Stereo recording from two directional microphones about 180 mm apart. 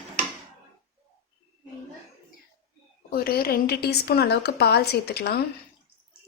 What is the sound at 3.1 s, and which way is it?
A woman's voice, 55° left (ahead or behind).